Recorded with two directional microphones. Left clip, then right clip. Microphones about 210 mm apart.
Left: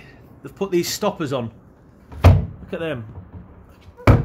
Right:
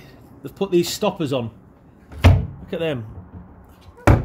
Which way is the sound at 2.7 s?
45° right (ahead or behind).